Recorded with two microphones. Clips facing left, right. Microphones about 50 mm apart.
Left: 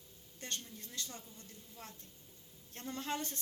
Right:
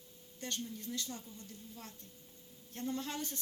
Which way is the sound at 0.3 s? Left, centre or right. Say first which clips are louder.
Right 4 dB; left.